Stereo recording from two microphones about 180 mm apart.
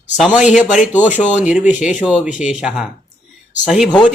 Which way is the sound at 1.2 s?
40° left (ahead or behind).